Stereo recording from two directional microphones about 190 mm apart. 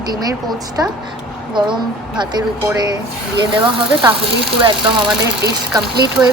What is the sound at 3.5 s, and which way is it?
Speech, 25° right (ahead or behind).